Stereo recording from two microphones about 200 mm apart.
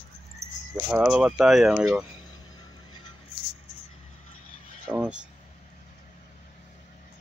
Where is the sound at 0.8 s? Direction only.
5° right (ahead or behind).